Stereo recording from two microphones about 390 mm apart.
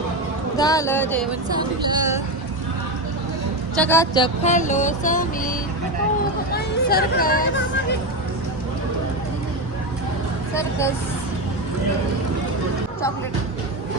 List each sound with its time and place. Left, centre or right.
0.5 s vehicle: centre
1.5 s speech: centre
3.8 s vehicle: centre
6.5 s hubbub: left
10.5 s vehicle: centre